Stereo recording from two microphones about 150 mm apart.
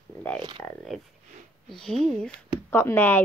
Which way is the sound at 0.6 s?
Centre (ahead or behind).